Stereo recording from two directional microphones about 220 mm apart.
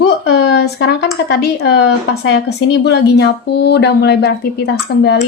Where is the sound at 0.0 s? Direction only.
50° left (ahead or behind).